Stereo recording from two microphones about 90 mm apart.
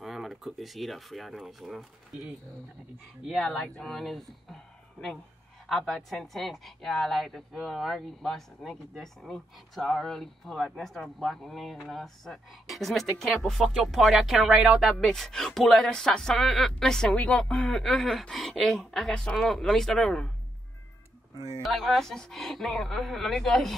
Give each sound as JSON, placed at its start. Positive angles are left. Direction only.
{"t": 0.0, "sound": "speech", "side_deg": 0}
{"t": 3.4, "sound": "speech", "side_deg": 10}
{"t": 5.7, "sound": "a woman's voice", "side_deg": 5}
{"t": 21.4, "sound": "speech", "side_deg": -35}
{"t": 21.6, "sound": "a woman's voice", "side_deg": 0}